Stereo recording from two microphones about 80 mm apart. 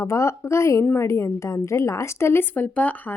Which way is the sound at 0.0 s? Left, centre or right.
Left.